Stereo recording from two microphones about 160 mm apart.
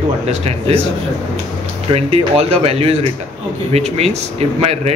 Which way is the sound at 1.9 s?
40° right (ahead or behind).